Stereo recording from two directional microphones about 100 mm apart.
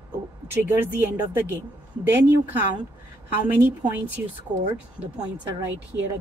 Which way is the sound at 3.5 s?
20° right (ahead or behind).